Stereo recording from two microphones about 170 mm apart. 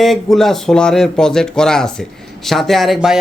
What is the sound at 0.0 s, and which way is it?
Speech, centre (ahead or behind).